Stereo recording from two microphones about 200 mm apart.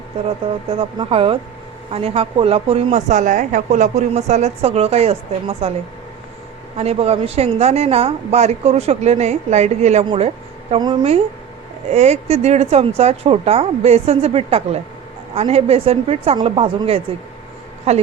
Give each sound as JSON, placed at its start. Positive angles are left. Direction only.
{"t": 0.8, "sound": "a woman's voice", "side_deg": -25}
{"t": 6.7, "sound": "a woman's voice", "side_deg": -30}